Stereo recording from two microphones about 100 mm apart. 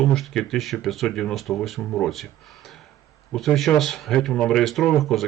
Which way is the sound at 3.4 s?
Centre (ahead or behind).